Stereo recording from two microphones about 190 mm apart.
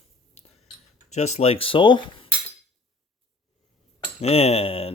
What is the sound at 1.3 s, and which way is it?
Speech, 30° left (ahead or behind).